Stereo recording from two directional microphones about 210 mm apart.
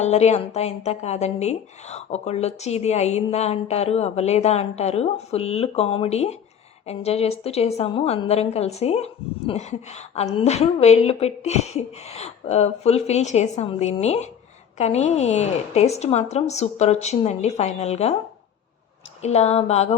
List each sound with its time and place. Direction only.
0.0 s a woman's voice: 30° left (ahead or behind)
19.2 s a woman's voice: 30° left (ahead or behind)